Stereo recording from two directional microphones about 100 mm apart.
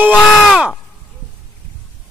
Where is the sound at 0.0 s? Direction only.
10° right (ahead or behind).